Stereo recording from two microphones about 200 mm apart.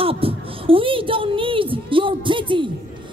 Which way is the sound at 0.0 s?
25° right (ahead or behind).